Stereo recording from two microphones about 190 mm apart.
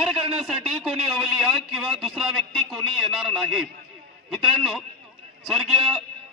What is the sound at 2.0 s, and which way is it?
A man's voice, centre (ahead or behind).